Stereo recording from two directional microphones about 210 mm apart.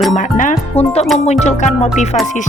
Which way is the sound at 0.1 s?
40° left (ahead or behind).